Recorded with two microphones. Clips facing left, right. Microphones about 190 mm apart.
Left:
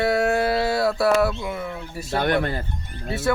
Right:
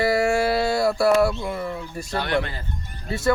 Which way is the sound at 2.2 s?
50° left (ahead or behind).